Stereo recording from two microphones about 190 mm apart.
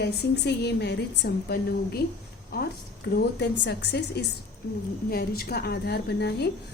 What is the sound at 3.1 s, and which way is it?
A woman's voice, 65° left (ahead or behind).